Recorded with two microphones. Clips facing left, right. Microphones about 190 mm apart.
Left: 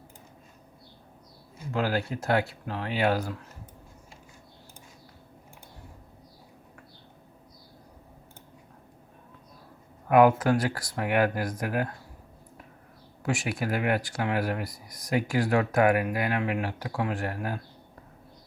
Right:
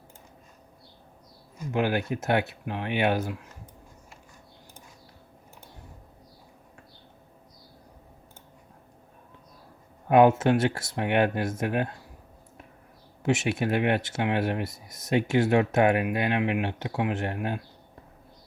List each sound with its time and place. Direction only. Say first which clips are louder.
1.7 s speech: right 2 dB; 20° right (ahead or behind)
10.1 s speech: right 1 dB; 25° right (ahead or behind)
13.2 s speech: right 4 dB; 20° right (ahead or behind)